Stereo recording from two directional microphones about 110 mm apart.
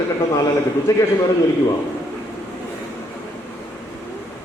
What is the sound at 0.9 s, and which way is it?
Speech, 30° left (ahead or behind).